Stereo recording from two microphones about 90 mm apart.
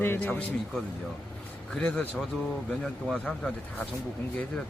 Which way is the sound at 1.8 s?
10° left (ahead or behind).